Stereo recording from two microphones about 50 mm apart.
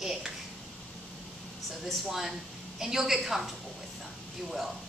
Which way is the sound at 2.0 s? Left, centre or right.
Centre.